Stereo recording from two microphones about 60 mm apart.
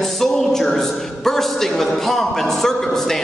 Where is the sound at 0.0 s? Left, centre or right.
Centre.